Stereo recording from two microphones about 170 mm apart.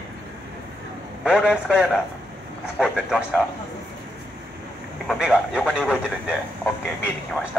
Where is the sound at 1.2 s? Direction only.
5° right (ahead or behind).